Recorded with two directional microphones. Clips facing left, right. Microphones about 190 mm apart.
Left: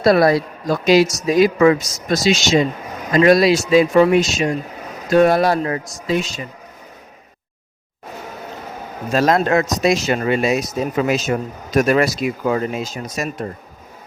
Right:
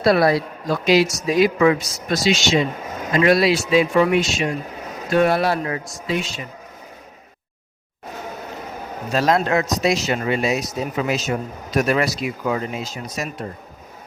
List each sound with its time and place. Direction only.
0.0 s speech: 45° left (ahead or behind)
9.1 s speech: 50° left (ahead or behind)